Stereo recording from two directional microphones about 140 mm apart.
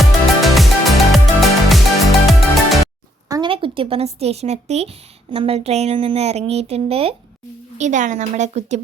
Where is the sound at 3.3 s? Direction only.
35° right (ahead or behind).